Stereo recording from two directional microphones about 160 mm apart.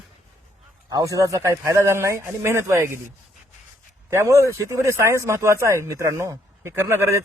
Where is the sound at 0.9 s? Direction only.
25° right (ahead or behind).